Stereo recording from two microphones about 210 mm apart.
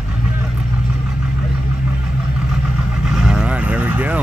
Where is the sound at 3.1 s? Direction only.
5° right (ahead or behind).